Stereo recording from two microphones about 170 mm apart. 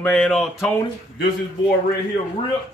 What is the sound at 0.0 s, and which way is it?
Speech, 5° left (ahead or behind).